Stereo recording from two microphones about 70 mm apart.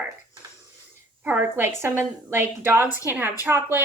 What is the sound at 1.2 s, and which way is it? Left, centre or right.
A woman's voice, right.